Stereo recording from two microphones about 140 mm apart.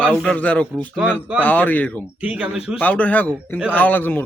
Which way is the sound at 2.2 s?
10° right (ahead or behind).